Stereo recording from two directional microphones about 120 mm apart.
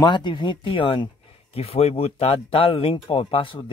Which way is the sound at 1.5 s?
55° left (ahead or behind).